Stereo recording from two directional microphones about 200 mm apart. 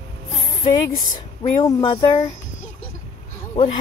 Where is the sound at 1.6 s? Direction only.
20° left (ahead or behind).